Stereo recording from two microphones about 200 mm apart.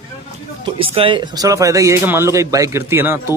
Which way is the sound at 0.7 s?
25° right (ahead or behind).